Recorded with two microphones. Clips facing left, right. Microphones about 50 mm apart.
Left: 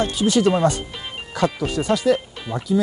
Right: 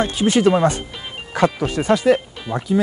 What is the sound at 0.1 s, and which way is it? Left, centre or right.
Speech, right.